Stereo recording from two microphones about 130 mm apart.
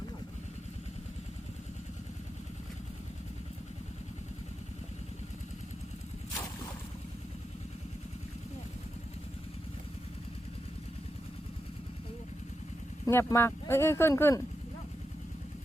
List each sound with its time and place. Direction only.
13.1 s speech: 20° left (ahead or behind)